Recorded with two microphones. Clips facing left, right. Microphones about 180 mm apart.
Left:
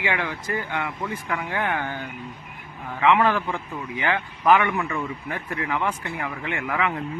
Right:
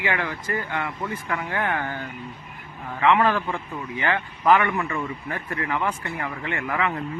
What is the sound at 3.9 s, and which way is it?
Speech, 15° left (ahead or behind).